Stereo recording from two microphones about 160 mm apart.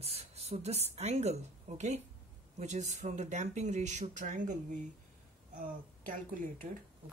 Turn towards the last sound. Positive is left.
turn(degrees=-50)  # may be behind; listen again after turning